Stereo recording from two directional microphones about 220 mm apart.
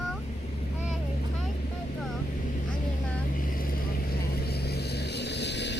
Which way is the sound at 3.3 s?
40° left (ahead or behind).